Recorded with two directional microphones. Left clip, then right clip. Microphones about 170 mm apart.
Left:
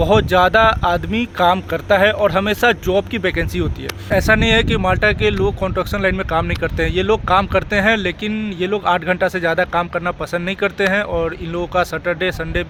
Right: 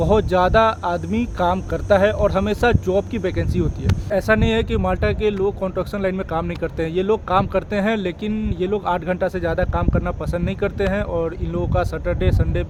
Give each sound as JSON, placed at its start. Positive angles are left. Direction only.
{"t": 0.0, "sound": "speech", "side_deg": 10}